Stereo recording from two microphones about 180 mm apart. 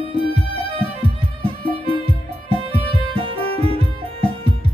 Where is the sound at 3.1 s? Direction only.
30° right (ahead or behind).